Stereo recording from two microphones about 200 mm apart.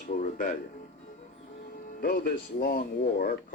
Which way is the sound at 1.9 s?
45° left (ahead or behind).